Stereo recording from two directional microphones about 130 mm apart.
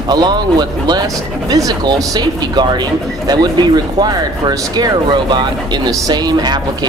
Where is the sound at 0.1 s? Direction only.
35° right (ahead or behind).